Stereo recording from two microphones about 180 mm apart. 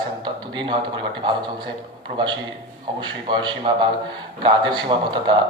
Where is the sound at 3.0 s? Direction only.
25° right (ahead or behind).